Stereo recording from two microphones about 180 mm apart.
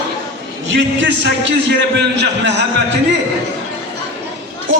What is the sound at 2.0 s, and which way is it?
Speech, 70° right (ahead or behind).